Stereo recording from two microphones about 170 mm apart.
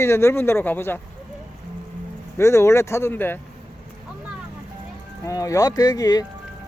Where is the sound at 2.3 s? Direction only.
15° left (ahead or behind).